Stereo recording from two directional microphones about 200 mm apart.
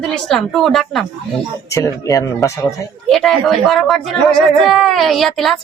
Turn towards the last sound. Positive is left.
turn(degrees=0)  # may be behind; listen again after turning